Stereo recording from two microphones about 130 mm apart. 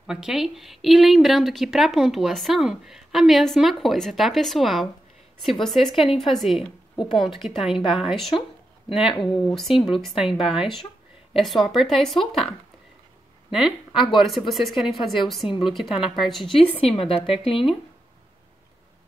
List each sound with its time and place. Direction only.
0.0 s a woman's voice: 5° right (ahead or behind)
8.4 s speech: 45° left (ahead or behind)
9.4 s a woman's voice: centre (ahead or behind)
13.5 s a woman's voice: 5° right (ahead or behind)
16.9 s speech: 45° left (ahead or behind)